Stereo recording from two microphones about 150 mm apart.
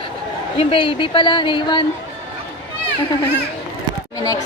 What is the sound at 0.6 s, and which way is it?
A woman's voice, 35° left (ahead or behind).